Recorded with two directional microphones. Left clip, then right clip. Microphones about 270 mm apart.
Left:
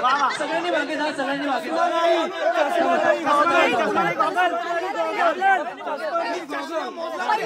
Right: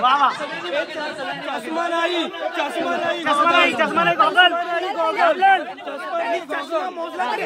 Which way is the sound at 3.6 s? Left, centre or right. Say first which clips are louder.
Right 2 dB; right.